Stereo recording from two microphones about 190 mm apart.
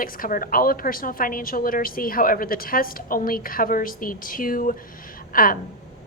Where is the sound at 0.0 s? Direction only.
45° left (ahead or behind).